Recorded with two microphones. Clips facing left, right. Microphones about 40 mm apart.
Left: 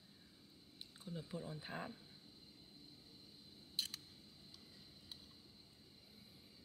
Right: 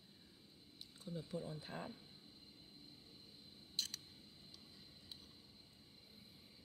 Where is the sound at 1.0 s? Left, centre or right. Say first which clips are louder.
Right 2 dB; left.